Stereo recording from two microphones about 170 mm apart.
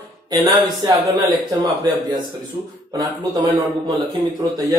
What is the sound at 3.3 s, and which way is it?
A man's voice, 20° right (ahead or behind).